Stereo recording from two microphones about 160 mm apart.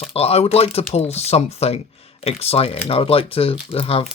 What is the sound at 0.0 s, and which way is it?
Speech, 40° left (ahead or behind).